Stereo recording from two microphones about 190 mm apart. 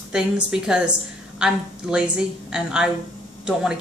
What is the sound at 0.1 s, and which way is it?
Speech, 5° right (ahead or behind).